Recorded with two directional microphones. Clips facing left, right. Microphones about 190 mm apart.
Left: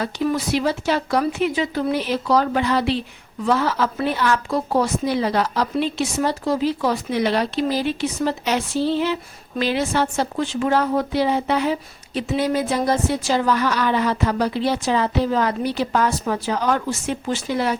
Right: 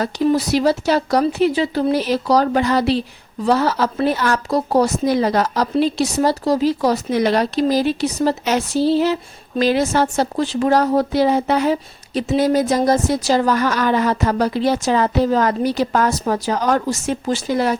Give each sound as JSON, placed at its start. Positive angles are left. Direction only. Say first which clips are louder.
{"t": 0.3, "sound": "a woman's voice", "louder": "right 6 dB", "side_deg": -40}